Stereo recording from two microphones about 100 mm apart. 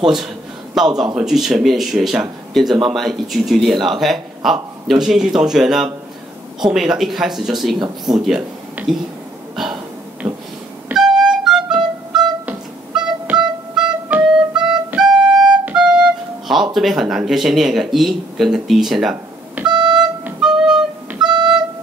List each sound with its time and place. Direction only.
0.0 s speech: 5° right (ahead or behind)
10.2 s a sound: 45° right (ahead or behind)
10.9 s music: 5° right (ahead or behind)
16.7 s speech: centre (ahead or behind)
19.7 s a sound: 50° right (ahead or behind)
20.3 s music: 5° right (ahead or behind)